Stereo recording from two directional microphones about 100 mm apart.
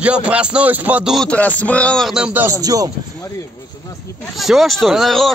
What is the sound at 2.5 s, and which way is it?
Speech, 35° right (ahead or behind).